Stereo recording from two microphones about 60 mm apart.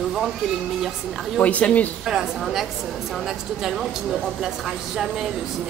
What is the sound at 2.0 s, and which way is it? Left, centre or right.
Speech, centre.